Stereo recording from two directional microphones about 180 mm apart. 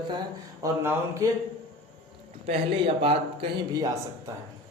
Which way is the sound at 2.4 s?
30° right (ahead or behind).